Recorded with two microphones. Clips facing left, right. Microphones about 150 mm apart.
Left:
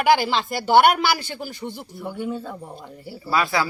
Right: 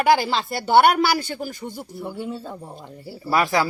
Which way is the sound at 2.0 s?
30° right (ahead or behind).